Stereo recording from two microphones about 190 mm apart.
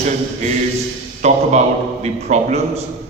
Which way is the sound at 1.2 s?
35° right (ahead or behind).